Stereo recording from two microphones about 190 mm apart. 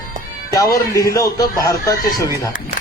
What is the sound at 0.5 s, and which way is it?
A man's voice, 20° left (ahead or behind).